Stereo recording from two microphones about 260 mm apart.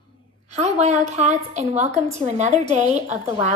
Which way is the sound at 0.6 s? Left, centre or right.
Right.